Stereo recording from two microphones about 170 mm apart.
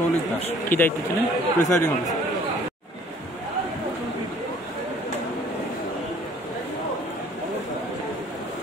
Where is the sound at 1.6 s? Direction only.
15° left (ahead or behind).